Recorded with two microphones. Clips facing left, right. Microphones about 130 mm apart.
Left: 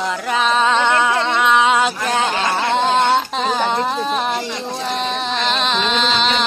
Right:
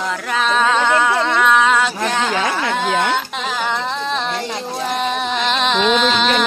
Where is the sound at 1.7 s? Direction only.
15° left (ahead or behind).